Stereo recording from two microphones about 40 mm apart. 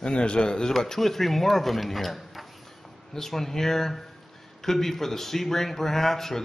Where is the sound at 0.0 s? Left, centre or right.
Left.